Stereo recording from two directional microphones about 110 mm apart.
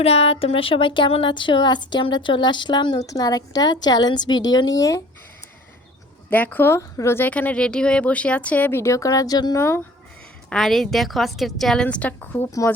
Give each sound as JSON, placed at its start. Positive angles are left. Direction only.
{"t": 0.0, "sound": "a woman's voice", "side_deg": 65}
{"t": 6.3, "sound": "speech", "side_deg": 15}
{"t": 9.6, "sound": "speech", "side_deg": 25}
{"t": 10.5, "sound": "a woman's voice", "side_deg": 0}
{"t": 12.5, "sound": "a woman's voice", "side_deg": 30}